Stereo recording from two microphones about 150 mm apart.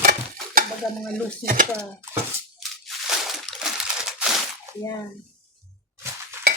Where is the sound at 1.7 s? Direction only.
15° right (ahead or behind).